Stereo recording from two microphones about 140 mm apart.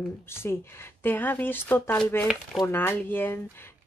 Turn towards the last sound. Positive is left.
turn(degrees=15)  # may be behind; listen again after turning